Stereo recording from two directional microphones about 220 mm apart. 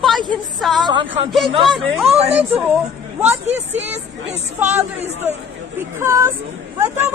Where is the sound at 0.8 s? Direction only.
20° right (ahead or behind).